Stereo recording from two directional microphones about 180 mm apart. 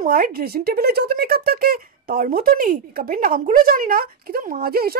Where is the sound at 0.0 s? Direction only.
55° right (ahead or behind).